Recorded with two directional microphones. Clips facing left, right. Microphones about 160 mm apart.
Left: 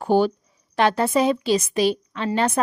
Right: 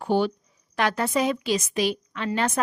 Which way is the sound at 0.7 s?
30° left (ahead or behind).